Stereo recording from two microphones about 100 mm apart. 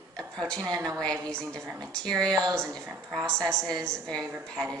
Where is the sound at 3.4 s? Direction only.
5° left (ahead or behind).